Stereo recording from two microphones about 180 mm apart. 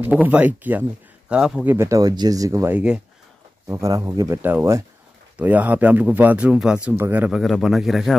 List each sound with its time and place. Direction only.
0.0 s speech: 10° right (ahead or behind)